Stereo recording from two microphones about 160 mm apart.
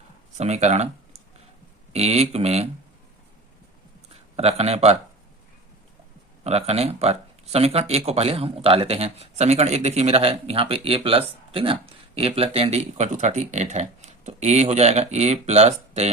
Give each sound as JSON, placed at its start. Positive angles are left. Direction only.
{"t": 0.3, "sound": "speech", "side_deg": -45}
{"t": 1.9, "sound": "speech", "side_deg": -40}
{"t": 4.4, "sound": "speech", "side_deg": -40}
{"t": 6.4, "sound": "speech", "side_deg": -40}